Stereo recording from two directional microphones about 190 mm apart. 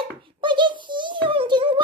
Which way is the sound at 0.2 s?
25° right (ahead or behind).